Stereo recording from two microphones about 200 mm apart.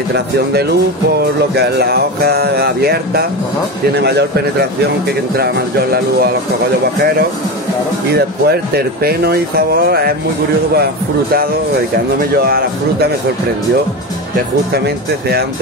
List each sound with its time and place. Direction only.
0.1 s speech: 55° right (ahead or behind)
8.1 s speech: 50° right (ahead or behind)
12.2 s speech: 50° right (ahead or behind)